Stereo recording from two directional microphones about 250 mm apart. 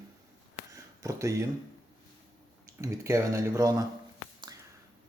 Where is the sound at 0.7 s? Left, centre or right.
Centre.